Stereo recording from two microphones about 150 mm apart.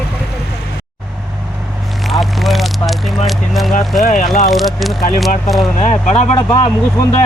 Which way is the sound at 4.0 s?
55° left (ahead or behind).